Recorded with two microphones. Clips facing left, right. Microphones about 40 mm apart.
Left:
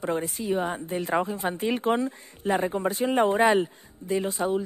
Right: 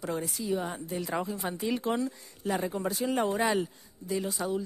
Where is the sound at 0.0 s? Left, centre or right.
Left.